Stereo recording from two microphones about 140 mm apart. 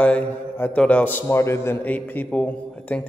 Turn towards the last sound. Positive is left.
turn(degrees=10)  # may be behind; listen again after turning